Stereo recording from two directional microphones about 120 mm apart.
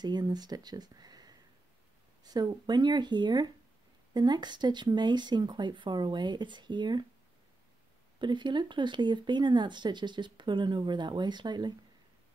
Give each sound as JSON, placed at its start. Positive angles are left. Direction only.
{"t": 0.0, "sound": "speech", "side_deg": -35}
{"t": 8.2, "sound": "speech", "side_deg": -40}